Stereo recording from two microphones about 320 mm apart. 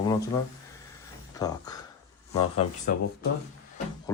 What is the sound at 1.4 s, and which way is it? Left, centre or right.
Speech, centre.